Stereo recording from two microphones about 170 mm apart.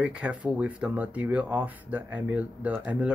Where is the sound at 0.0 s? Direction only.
5° right (ahead or behind).